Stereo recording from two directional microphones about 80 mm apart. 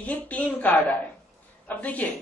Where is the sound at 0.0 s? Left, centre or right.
Centre.